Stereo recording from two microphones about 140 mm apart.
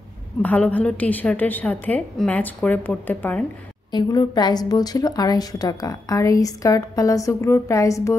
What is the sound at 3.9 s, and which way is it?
A woman's voice, 30° left (ahead or behind).